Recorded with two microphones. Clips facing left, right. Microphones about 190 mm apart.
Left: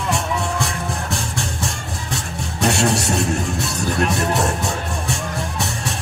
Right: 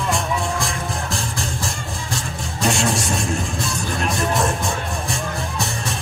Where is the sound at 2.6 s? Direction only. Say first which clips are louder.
Left 2 dB; 65° left (ahead or behind).